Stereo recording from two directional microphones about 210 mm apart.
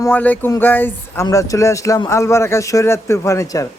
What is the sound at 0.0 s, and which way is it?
Speech, 10° left (ahead or behind).